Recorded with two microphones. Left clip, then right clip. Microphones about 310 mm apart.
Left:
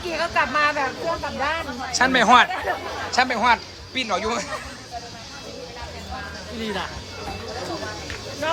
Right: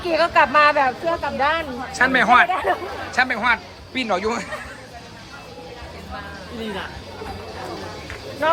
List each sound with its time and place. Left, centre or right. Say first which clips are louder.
0.1 s speech: right 6 dB; centre
1.9 s speech: even; centre
2.5 s speech: right 5 dB; right
3.1 s speech: even; centre